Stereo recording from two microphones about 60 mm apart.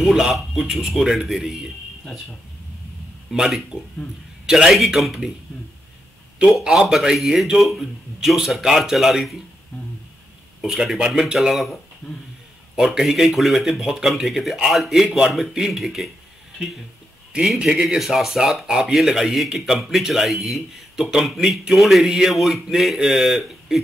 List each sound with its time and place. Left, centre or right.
0.0 s speech: centre
3.3 s speech: centre
4.6 s speech: centre
6.7 s speech: centre
10.6 s speech: centre
12.7 s speech: centre
17.6 s speech: centre